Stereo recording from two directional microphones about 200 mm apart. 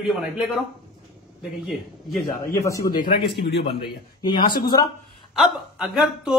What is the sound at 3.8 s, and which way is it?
Speech, 25° left (ahead or behind).